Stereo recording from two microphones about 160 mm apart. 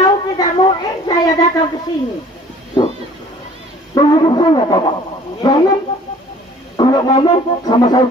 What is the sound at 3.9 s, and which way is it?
Speech, 25° left (ahead or behind).